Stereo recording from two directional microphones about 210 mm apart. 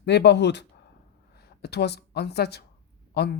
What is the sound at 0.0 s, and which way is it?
A woman's voice, 55° left (ahead or behind).